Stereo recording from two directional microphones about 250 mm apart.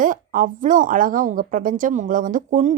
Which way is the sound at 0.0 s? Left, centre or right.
Right.